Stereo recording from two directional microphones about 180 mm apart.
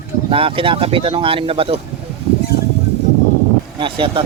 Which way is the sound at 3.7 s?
25° right (ahead or behind).